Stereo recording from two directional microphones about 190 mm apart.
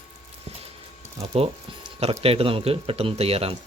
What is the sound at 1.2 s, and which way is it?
Speech, 30° right (ahead or behind).